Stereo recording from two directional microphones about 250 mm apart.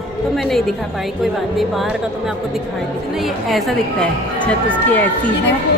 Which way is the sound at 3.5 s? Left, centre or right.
Centre.